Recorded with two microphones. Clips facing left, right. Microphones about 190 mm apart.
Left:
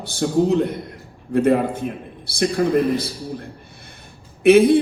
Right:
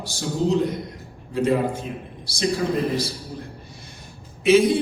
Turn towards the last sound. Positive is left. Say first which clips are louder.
# left 4 dB
turn(degrees=55)  # may be behind; listen again after turning